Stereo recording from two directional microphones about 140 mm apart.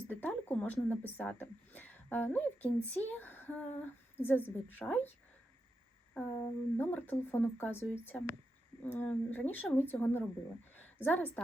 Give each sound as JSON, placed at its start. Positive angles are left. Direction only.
{"t": 0.1, "sound": "speech", "side_deg": 10}
{"t": 6.1, "sound": "a woman's voice", "side_deg": 15}